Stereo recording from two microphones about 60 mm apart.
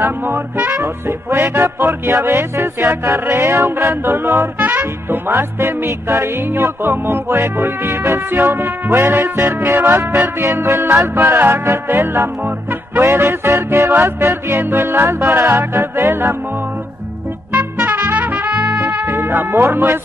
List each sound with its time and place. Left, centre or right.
0.0 s music: right
0.7 s music: right
2.1 s music: right
4.6 s music: right
10.4 s music: right
11.1 s music: right
17.5 s music: right
19.0 s speech: right